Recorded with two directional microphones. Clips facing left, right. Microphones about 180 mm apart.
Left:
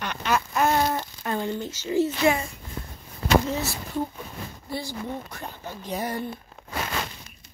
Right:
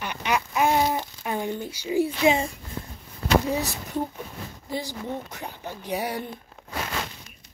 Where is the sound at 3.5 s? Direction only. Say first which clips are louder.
Right 1 dB; 20° right (ahead or behind).